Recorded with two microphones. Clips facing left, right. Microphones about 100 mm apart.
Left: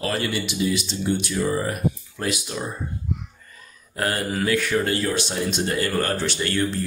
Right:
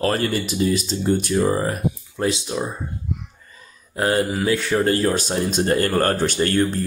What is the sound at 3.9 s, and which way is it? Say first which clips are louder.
Speech: right 5 dB; 25° right (ahead or behind).